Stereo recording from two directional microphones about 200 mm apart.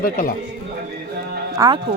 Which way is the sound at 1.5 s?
20° right (ahead or behind).